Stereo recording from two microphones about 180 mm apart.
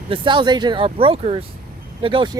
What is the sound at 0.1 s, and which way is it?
Speech, 25° right (ahead or behind).